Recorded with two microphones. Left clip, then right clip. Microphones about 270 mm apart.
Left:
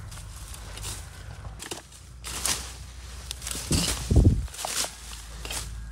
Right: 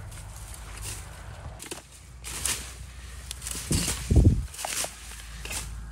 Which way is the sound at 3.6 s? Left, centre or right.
Right.